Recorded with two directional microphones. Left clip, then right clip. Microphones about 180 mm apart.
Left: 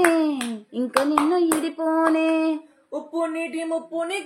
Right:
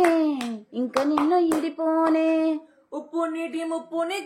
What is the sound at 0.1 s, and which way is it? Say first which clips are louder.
Hands: left 1 dB; 30° left (ahead or behind).